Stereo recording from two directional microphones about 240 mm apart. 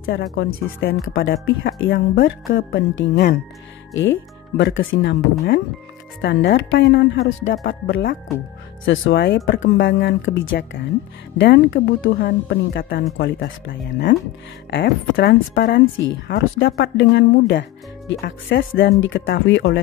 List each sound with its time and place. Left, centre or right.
0.0 s a woman's voice: left
6.2 s a woman's voice: left
8.8 s a woman's voice: left